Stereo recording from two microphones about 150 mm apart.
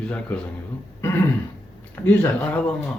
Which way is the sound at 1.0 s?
15° left (ahead or behind).